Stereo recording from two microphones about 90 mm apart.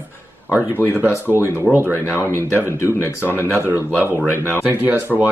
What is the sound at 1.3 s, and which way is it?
Speech, 25° right (ahead or behind).